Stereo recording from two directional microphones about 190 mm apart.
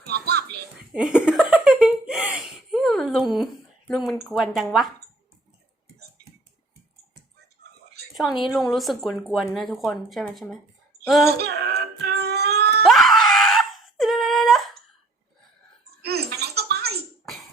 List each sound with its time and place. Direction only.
0.0 s a child's voice: 60° right (ahead or behind)
0.9 s laughter: 5° right (ahead or behind)
4.3 s speech: centre (ahead or behind)
8.1 s speech: centre (ahead or behind)
11.3 s a sound: 55° right (ahead or behind)
12.8 s wail: centre (ahead or behind)
16.0 s baby laughter: 60° right (ahead or behind)
17.2 s music: centre (ahead or behind)